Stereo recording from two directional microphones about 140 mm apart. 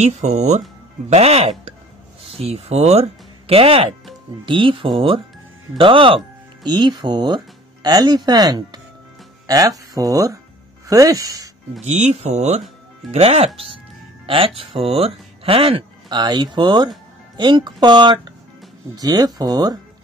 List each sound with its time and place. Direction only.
0.0 s speech: 55° right (ahead or behind); by 11.5 s 25° right (ahead or behind)
11.8 s speech: 50° right (ahead or behind); by 19.8 s 30° right (ahead or behind)